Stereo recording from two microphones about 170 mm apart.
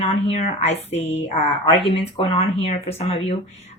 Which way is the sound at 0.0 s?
40° left (ahead or behind).